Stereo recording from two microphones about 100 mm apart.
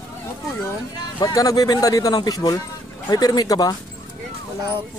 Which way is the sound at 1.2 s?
35° left (ahead or behind).